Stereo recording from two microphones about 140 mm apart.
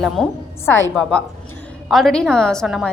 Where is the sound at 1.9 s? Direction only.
Centre (ahead or behind).